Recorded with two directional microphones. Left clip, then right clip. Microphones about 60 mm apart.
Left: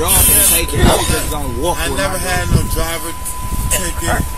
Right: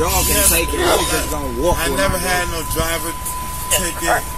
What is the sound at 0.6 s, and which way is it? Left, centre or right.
Speech, left.